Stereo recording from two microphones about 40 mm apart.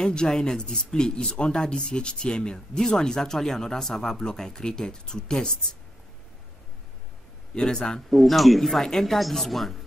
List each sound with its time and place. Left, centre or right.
0.0 s speech: centre
7.5 s speech: centre
8.1 s speech: centre